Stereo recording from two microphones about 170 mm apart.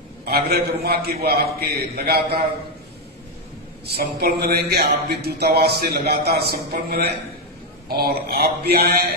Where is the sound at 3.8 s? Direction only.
70° right (ahead or behind).